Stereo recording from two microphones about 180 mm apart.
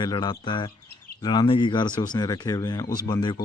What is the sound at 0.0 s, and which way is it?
Speech, 25° left (ahead or behind).